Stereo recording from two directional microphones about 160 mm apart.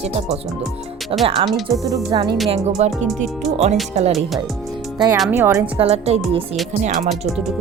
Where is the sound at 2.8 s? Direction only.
45° right (ahead or behind).